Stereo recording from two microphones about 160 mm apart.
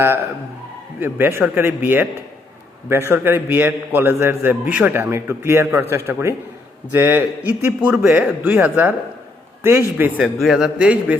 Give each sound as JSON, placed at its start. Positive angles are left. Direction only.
{"t": 0.9, "sound": "a man's voice", "side_deg": -10}
{"t": 10.2, "sound": "a man's voice", "side_deg": 0}